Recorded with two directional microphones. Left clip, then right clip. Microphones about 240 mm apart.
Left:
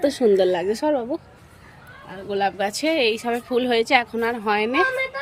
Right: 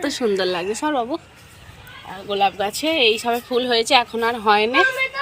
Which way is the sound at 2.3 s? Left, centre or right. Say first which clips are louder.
Right 3 dB; centre.